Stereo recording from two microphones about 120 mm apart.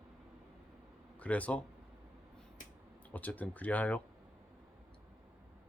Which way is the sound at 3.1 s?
15° left (ahead or behind).